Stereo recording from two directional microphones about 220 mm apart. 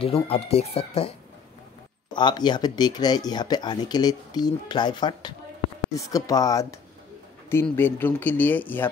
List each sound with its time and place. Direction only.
0.0 s speech: 25° left (ahead or behind)
2.1 s speech: 20° left (ahead or behind)